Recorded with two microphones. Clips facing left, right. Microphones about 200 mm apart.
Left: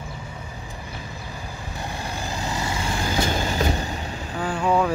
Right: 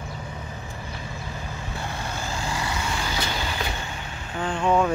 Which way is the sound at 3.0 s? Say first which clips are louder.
Left 5 dB; 45° left (ahead or behind).